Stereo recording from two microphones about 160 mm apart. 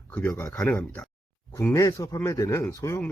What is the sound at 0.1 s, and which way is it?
Speech, 10° left (ahead or behind).